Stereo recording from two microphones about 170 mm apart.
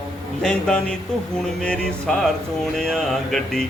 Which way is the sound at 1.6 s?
5° left (ahead or behind).